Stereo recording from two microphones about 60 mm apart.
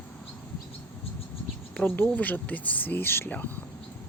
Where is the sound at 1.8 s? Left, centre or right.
Left.